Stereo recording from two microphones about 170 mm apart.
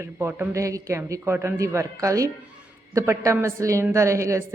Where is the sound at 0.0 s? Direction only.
15° right (ahead or behind).